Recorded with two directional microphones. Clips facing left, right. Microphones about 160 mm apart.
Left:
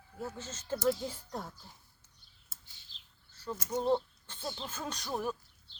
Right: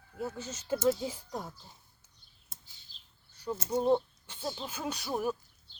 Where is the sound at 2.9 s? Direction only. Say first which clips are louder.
Left 3 dB; 40° right (ahead or behind).